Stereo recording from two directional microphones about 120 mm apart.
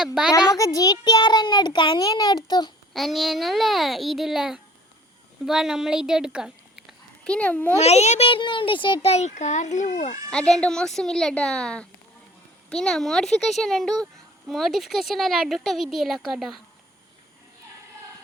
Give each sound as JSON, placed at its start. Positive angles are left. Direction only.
{"t": 0.0, "sound": "speech", "side_deg": -5}
{"t": 0.3, "sound": "a child's voice", "side_deg": 30}
{"t": 2.9, "sound": "speech", "side_deg": 0}
{"t": 7.3, "sound": "speech", "side_deg": 10}
{"t": 7.8, "sound": "a child's voice", "side_deg": 65}
{"t": 8.3, "sound": "a child's voice", "side_deg": 45}
{"t": 10.2, "sound": "speech", "side_deg": 5}